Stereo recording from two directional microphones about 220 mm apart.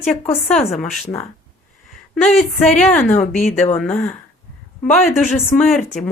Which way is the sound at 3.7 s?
Centre (ahead or behind).